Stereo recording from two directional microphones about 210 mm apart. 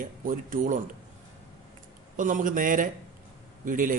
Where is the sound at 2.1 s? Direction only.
40° right (ahead or behind).